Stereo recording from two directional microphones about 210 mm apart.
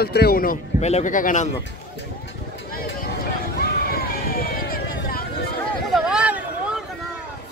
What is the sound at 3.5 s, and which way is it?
Run, 45° left (ahead or behind).